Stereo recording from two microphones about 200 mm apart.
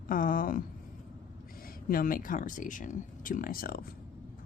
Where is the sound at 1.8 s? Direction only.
45° left (ahead or behind).